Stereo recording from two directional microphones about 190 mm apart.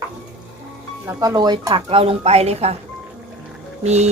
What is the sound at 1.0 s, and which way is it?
Speech, 15° right (ahead or behind).